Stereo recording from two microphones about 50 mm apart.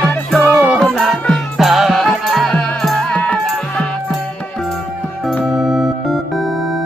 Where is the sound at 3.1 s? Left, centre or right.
Left.